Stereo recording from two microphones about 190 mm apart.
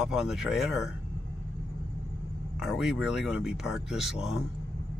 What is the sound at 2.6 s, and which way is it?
Speech, centre (ahead or behind).